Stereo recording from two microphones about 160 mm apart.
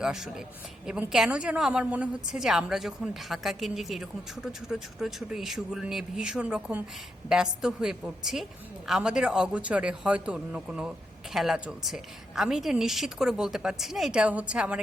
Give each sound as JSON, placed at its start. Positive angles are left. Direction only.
{"t": 0.0, "sound": "a woman's voice", "side_deg": -5}